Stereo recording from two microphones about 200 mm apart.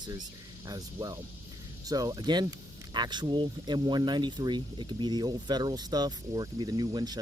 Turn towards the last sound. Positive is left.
turn(degrees=-20)  # may be behind; listen again after turning